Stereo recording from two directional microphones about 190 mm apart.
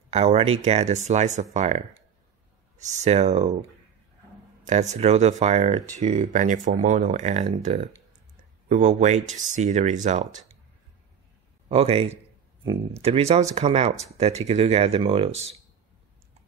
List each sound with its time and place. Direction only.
0.1 s speech: 35° right (ahead or behind)
2.9 s speech: 35° right (ahead or behind)
4.6 s speech: 35° right (ahead or behind)
11.7 s speech: 30° right (ahead or behind)